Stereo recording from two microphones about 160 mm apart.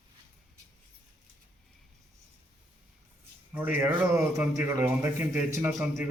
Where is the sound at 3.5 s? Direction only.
10° right (ahead or behind).